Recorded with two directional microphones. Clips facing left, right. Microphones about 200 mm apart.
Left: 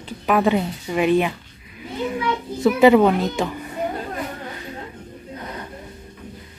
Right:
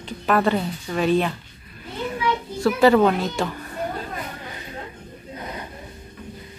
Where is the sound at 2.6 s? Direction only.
20° left (ahead or behind).